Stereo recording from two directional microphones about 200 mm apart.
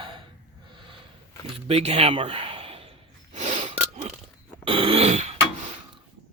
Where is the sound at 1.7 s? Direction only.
30° right (ahead or behind).